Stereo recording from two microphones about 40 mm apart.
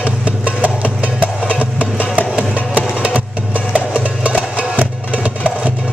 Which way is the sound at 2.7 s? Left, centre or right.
Right.